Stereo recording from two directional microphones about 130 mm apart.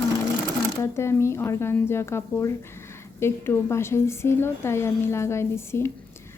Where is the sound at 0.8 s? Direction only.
20° left (ahead or behind).